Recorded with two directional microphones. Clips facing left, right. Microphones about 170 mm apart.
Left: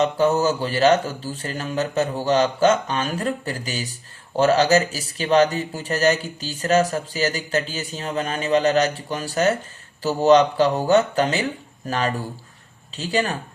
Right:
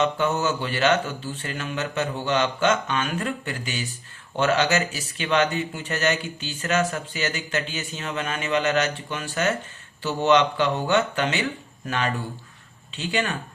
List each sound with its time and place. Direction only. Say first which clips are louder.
0.0 s speech: left 4 dB; 35° left (ahead or behind)